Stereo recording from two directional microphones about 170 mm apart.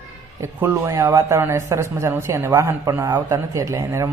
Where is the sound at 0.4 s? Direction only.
15° right (ahead or behind).